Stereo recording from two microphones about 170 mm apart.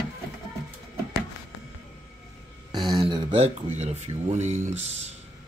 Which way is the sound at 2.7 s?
20° right (ahead or behind).